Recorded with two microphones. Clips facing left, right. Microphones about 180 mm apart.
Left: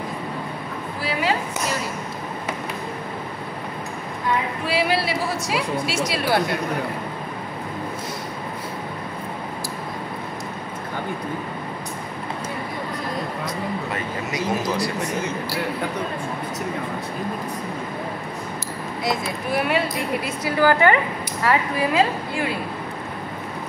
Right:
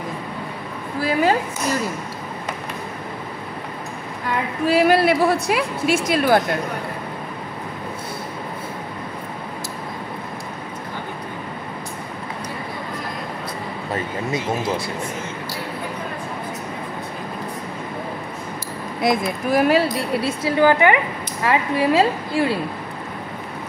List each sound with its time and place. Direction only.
4.6 s a woman's voice: 45° right (ahead or behind)
13.9 s speech: 25° right (ahead or behind)
19.0 s a woman's voice: 40° right (ahead or behind); by 21.0 s 20° right (ahead or behind)
21.5 s a woman's voice: 30° right (ahead or behind)